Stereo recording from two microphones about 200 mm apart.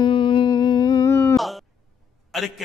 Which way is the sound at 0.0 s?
25° left (ahead or behind).